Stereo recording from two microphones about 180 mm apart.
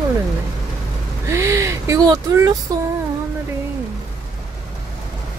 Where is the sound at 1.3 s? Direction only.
15° right (ahead or behind).